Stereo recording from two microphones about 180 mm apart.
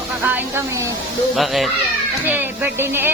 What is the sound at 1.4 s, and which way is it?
Speech, centre (ahead or behind).